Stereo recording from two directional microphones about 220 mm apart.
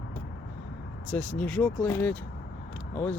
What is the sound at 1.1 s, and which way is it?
Speech, 5° left (ahead or behind).